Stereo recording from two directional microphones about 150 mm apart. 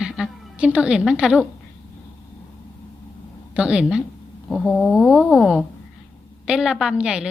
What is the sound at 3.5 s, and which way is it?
A woman's voice, 5° right (ahead or behind).